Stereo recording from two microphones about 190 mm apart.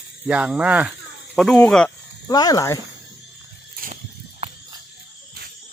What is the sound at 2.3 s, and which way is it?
Speech, 20° left (ahead or behind).